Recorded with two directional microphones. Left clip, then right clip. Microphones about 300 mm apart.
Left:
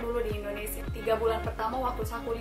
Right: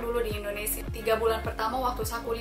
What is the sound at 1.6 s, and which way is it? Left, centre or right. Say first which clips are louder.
Speech: right 3 dB; centre.